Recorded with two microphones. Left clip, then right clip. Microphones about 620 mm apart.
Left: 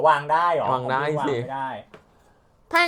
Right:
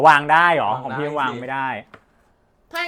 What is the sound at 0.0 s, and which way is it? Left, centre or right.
Speech, right.